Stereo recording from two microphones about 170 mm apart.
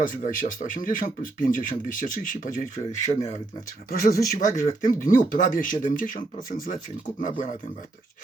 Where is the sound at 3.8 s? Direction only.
60° left (ahead or behind).